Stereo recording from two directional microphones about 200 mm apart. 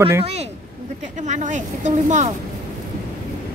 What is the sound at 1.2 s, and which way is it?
A woman's voice, 35° right (ahead or behind).